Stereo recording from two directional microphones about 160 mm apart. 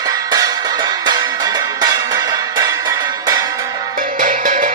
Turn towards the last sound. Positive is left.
turn(degrees=-55)  # may be behind; listen again after turning